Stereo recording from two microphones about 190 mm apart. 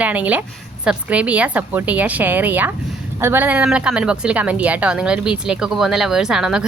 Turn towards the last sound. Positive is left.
turn(degrees=-5)  # may be behind; listen again after turning